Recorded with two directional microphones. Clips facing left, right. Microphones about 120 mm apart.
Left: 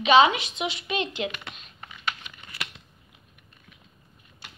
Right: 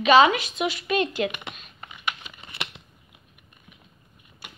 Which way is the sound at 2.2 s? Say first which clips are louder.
Right 2 dB; 25° right (ahead or behind).